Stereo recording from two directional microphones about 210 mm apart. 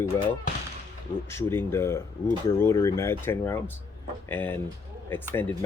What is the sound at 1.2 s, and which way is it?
Speech, 10° left (ahead or behind).